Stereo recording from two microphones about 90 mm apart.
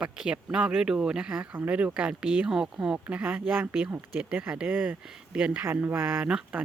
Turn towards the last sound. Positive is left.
turn(degrees=-10)  # may be behind; listen again after turning